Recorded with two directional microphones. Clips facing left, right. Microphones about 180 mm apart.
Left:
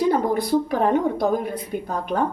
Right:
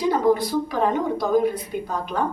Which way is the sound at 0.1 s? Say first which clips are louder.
Even; 55° left (ahead or behind).